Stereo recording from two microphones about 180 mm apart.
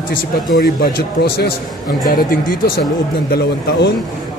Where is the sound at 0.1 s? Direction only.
50° left (ahead or behind).